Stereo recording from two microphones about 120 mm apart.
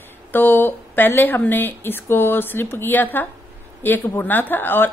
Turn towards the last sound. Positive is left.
turn(degrees=15)  # may be behind; listen again after turning